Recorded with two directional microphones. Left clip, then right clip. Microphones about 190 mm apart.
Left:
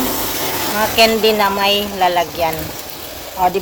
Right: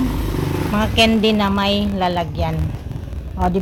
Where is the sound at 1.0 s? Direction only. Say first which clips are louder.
Left 4 dB; 10° right (ahead or behind).